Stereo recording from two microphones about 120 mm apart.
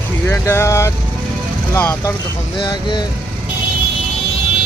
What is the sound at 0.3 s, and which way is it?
Speech, 20° left (ahead or behind).